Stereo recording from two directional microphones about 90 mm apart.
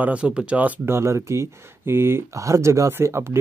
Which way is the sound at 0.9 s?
30° right (ahead or behind).